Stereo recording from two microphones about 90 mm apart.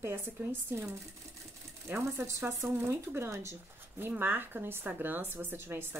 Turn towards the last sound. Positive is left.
turn(degrees=-25)  # may be behind; listen again after turning